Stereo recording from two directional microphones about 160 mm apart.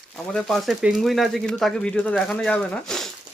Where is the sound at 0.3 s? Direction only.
Centre (ahead or behind).